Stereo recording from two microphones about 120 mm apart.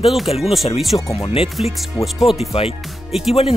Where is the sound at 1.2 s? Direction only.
55° left (ahead or behind).